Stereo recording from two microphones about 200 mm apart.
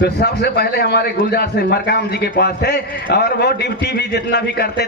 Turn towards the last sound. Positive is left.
turn(degrees=55)  # may be behind; listen again after turning